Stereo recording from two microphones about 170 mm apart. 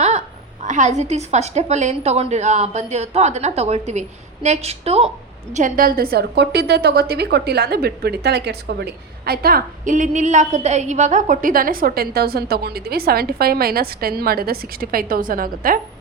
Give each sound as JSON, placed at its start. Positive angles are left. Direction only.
{"t": 0.6, "sound": "a woman's voice", "side_deg": -45}
{"t": 5.5, "sound": "a woman's voice", "side_deg": -50}